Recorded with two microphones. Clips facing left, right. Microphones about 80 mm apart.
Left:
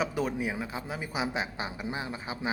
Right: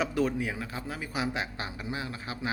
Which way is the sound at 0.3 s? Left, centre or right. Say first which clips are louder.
Left 1 dB; centre.